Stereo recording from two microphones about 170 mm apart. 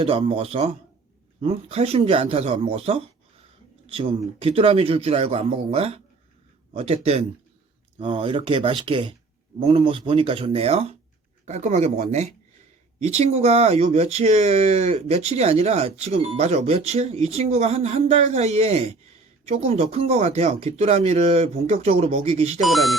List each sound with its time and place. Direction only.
0.0 s speech: 35° right (ahead or behind)
22.6 s speech: centre (ahead or behind)